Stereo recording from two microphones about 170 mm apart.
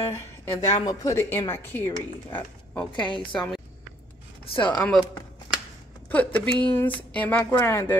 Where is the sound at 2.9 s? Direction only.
30° left (ahead or behind).